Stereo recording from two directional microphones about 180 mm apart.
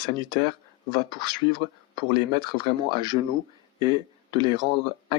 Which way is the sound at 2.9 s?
25° right (ahead or behind).